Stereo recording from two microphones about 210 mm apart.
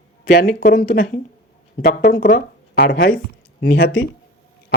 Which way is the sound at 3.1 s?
45° left (ahead or behind).